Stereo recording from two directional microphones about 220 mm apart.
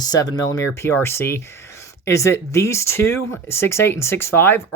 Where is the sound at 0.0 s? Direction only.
15° left (ahead or behind).